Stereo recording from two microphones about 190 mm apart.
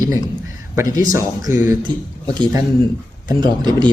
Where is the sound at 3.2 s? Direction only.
20° right (ahead or behind).